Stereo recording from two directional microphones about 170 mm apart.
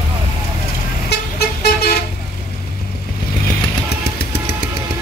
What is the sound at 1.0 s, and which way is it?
Vehicle, 70° left (ahead or behind).